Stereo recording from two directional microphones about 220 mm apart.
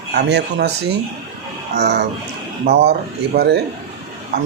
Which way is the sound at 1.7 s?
50° right (ahead or behind).